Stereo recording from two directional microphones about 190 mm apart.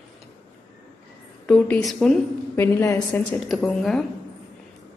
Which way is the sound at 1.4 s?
5° left (ahead or behind).